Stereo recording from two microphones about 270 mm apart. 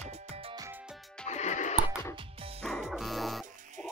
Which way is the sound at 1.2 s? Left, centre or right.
Left.